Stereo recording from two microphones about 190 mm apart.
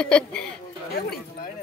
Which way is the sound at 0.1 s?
5° left (ahead or behind).